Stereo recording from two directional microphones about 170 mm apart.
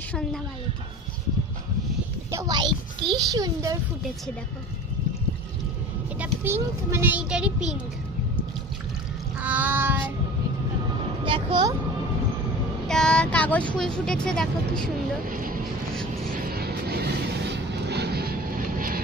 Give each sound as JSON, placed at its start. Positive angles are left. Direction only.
{"t": 0.1, "sound": "a woman's voice", "side_deg": 5}
{"t": 2.3, "sound": "a sound", "side_deg": -25}
{"t": 6.1, "sound": "a child's voice", "side_deg": -15}
{"t": 9.4, "sound": "child singing", "side_deg": -10}
{"t": 11.2, "sound": "speech", "side_deg": -30}
{"t": 12.8, "sound": "speech", "side_deg": 5}
{"t": 15.2, "sound": "vehicle", "side_deg": -55}